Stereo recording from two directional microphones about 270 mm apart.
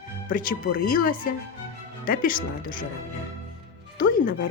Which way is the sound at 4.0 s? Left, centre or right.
Left.